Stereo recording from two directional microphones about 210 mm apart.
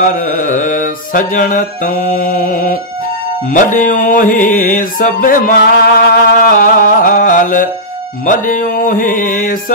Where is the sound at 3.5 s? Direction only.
40° left (ahead or behind).